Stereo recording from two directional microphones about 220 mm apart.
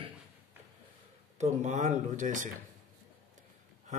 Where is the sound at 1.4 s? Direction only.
30° right (ahead or behind).